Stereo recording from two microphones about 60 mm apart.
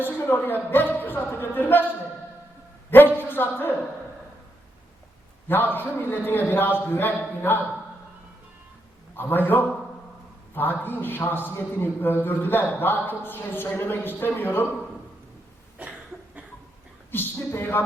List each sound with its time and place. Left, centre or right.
0.0 s speech: left
3.2 s a man's voice: left
5.5 s a man's voice: left
9.1 s a man's voice: left
15.8 s cough: right
17.1 s a man's voice: left